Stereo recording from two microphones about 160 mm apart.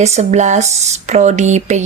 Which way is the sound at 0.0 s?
45° right (ahead or behind).